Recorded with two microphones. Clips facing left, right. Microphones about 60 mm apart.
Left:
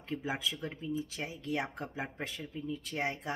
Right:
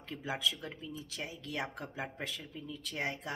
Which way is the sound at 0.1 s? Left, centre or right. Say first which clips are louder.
Left 1 dB; left.